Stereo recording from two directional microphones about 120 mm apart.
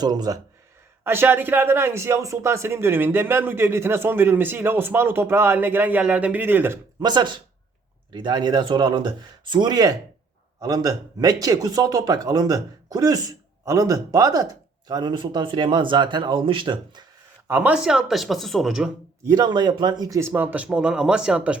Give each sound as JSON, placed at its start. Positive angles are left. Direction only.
{"t": 0.0, "sound": "speech", "side_deg": -35}
{"t": 1.0, "sound": "speech", "side_deg": -20}
{"t": 7.0, "sound": "speech", "side_deg": -35}
{"t": 17.5, "sound": "speech", "side_deg": -15}
{"t": 19.3, "sound": "speech", "side_deg": -35}